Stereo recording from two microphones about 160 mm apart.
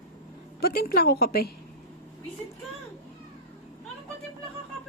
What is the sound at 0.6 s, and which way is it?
Speech, 70° left (ahead or behind).